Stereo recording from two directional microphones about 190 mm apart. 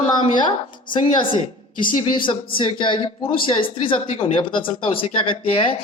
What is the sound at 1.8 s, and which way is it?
A woman's voice, 25° left (ahead or behind).